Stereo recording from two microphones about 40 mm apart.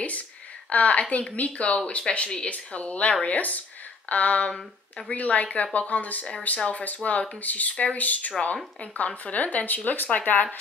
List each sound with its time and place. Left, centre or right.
0.7 s a woman's voice: left
3.3 s speech: left